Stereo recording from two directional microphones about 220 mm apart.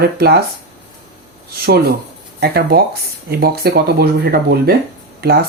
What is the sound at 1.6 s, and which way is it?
Speech, 45° right (ahead or behind).